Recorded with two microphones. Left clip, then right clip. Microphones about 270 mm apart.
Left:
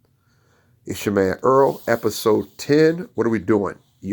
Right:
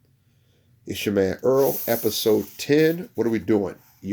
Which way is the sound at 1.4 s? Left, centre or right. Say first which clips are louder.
Left 6 dB; centre.